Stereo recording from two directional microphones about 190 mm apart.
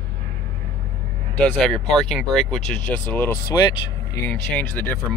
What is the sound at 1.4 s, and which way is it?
Speech, 5° left (ahead or behind).